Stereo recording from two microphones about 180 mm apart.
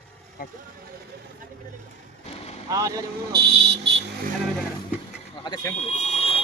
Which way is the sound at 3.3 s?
65° right (ahead or behind).